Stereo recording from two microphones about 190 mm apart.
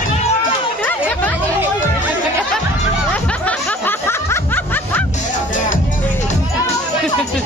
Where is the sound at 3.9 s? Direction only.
10° left (ahead or behind).